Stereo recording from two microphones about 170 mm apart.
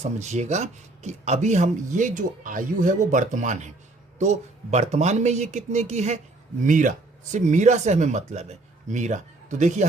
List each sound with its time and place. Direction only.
0.0 s speech: 40° right (ahead or behind)